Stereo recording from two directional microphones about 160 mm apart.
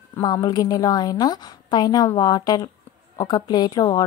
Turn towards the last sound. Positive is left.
turn(degrees=25)  # may be behind; listen again after turning